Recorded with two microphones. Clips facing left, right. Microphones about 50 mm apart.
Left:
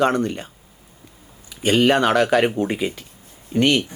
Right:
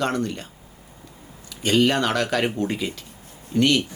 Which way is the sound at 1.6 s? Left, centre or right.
Centre.